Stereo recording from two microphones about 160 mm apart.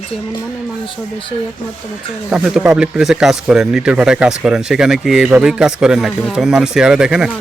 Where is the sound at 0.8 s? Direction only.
35° left (ahead or behind).